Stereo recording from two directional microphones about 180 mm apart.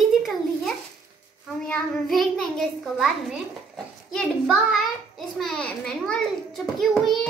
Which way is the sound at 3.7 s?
5° left (ahead or behind).